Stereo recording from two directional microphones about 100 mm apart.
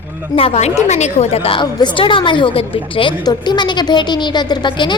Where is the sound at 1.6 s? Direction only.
45° left (ahead or behind).